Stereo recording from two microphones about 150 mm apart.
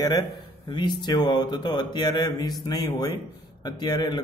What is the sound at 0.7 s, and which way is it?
A man's voice, 30° left (ahead or behind).